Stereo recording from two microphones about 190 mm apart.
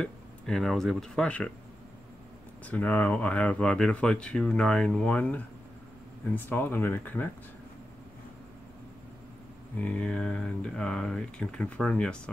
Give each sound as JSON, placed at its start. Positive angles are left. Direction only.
{"t": 0.0, "sound": "speech", "side_deg": 0}
{"t": 2.6, "sound": "speech", "side_deg": 10}
{"t": 9.8, "sound": "speech", "side_deg": 5}